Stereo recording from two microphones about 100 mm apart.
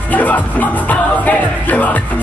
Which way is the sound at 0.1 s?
15° left (ahead or behind).